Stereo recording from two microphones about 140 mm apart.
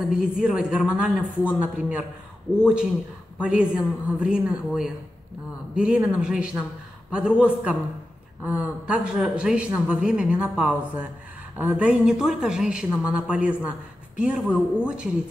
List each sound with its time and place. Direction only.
0.1 s speech: 5° right (ahead or behind)